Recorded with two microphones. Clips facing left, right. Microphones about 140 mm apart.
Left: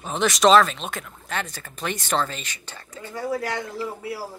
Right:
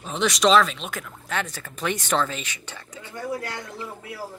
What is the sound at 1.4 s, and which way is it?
Speech, 10° left (ahead or behind).